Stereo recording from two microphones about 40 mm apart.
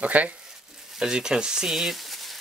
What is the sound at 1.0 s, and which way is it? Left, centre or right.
Speech, centre.